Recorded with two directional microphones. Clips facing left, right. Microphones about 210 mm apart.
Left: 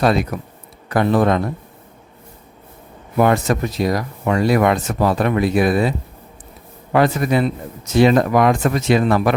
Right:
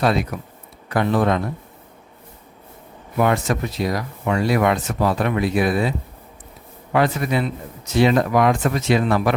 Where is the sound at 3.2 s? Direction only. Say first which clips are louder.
Left 4 dB; 40° left (ahead or behind).